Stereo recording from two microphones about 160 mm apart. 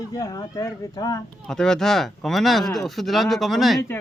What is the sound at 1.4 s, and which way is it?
Speech, 5° left (ahead or behind).